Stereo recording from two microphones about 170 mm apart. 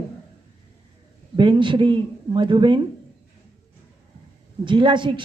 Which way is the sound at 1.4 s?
30° right (ahead or behind).